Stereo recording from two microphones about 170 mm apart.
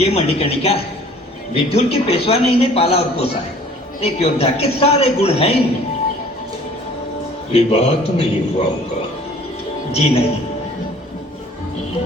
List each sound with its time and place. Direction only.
0.0 s a man's voice: 35° left (ahead or behind)
7.5 s a man's voice: 35° left (ahead or behind)
9.9 s a man's voice: 40° left (ahead or behind)